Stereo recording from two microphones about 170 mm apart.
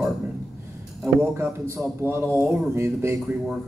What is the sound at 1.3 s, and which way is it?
Speech, 15° right (ahead or behind).